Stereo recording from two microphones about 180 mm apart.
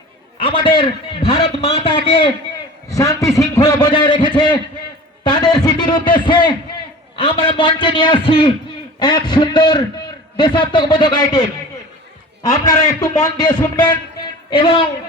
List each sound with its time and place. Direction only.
0.3 s a man's voice: 30° left (ahead or behind)
2.9 s a man's voice: 20° left (ahead or behind)